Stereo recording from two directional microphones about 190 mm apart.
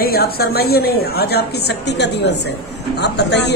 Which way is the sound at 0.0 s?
55° left (ahead or behind).